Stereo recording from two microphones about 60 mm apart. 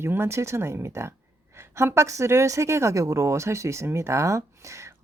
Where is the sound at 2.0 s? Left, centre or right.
Right.